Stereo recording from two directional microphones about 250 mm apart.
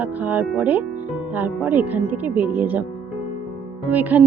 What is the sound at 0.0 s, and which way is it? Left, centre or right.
Speech, centre.